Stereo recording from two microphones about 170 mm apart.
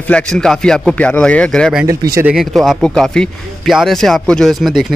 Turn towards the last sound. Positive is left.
turn(degrees=0)  # may be behind; listen again after turning